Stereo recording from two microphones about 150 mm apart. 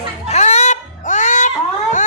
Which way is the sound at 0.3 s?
50° left (ahead or behind).